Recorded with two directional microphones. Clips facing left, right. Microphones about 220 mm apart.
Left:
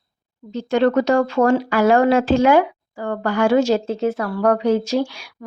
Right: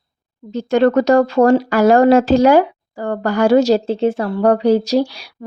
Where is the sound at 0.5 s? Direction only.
45° right (ahead or behind).